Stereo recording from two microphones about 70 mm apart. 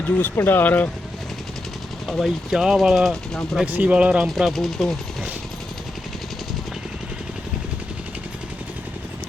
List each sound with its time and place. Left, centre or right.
0.0 s speech: left
2.0 s speech: centre
3.7 s speech: right
4.4 s speech: centre